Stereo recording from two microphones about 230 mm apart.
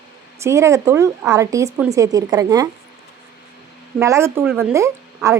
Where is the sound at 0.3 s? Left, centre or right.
Centre.